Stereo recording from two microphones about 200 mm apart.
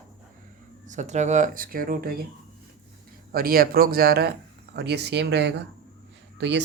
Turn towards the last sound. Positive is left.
turn(degrees=-60)  # may be behind; listen again after turning